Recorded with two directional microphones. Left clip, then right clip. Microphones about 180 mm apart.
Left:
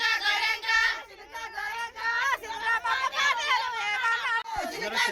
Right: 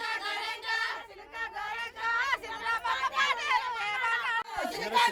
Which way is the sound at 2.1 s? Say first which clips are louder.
Left 3 dB; 50° left (ahead or behind).